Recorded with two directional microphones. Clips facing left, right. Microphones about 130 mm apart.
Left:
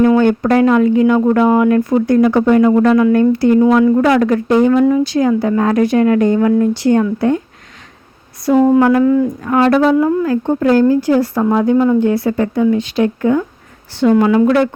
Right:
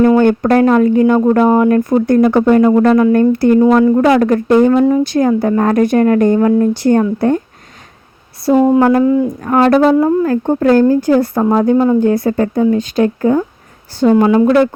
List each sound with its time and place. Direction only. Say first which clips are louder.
0.2 s speech: right 1 dB; 45° right (ahead or behind)
3.6 s speech: right 2 dB; 30° right (ahead or behind); by 4.7 s 50° right (ahead or behind)
4.7 s speech: right 1 dB; 35° right (ahead or behind)
5.0 s speech: right 1 dB; 50° right (ahead or behind)
8.5 s speech: even; 20° right (ahead or behind)
8.8 s speech: right 1 dB; 35° right (ahead or behind)
9.0 s speech: even; 20° right (ahead or behind)
9.4 s speech: right 4 dB; 40° right (ahead or behind)
11.4 s speech: right 1 dB; 40° right (ahead or behind)
11.9 s speech: right 2 dB; 45° right (ahead or behind)